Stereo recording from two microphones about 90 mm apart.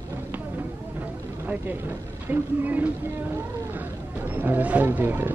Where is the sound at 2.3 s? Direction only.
20° right (ahead or behind).